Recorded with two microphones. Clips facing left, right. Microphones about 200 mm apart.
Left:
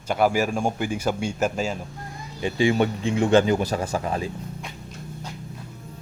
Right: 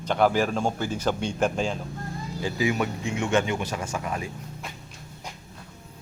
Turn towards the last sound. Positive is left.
turn(degrees=30)  # may be behind; listen again after turning